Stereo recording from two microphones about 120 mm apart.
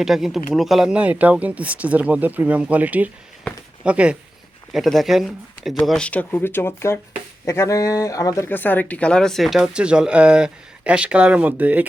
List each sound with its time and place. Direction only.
0.0 s speech: 5° right (ahead or behind); by 8.4 s 30° left (ahead or behind)
8.4 s speech: 15° left (ahead or behind); by 11.9 s 15° right (ahead or behind)